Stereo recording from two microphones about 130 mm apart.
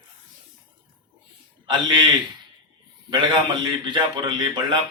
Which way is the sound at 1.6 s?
35° right (ahead or behind).